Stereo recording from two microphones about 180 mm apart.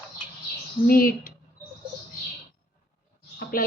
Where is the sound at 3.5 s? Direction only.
55° left (ahead or behind).